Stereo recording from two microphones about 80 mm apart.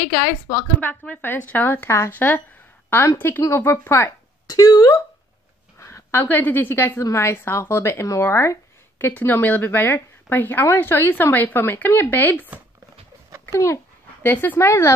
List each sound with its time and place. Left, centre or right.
0.0 s speech: left
0.7 s speech: centre
4.5 s speech: left
5.8 s a sound: left
6.2 s speech: left
7.0 s speech: left
13.5 s a child's voice: left
14.2 s speech: left